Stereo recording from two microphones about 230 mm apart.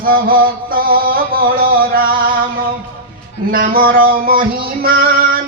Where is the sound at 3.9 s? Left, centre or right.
Right.